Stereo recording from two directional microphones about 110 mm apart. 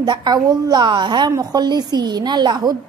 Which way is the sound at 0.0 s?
40° right (ahead or behind).